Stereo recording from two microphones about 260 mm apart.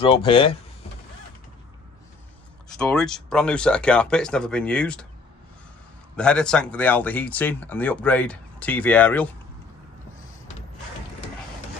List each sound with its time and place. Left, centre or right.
0.0 s speech: centre
2.8 s speech: centre
6.1 s speech: centre